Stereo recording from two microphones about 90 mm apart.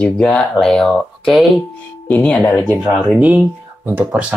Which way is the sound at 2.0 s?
15° left (ahead or behind).